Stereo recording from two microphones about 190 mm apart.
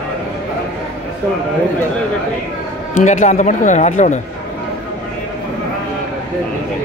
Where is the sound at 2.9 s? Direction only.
40° left (ahead or behind).